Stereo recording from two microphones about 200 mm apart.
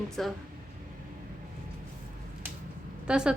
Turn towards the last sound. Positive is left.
turn(degrees=-5)  # may be behind; listen again after turning